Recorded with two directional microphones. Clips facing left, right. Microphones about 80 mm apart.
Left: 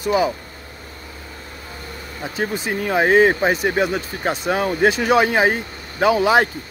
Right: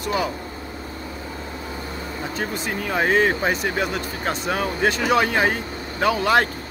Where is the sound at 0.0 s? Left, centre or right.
Centre.